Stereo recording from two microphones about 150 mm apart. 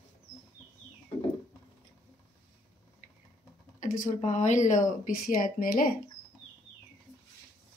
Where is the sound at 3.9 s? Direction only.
55° left (ahead or behind).